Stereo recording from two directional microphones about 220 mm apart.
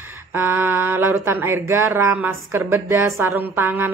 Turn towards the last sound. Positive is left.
turn(degrees=-10)  # may be behind; listen again after turning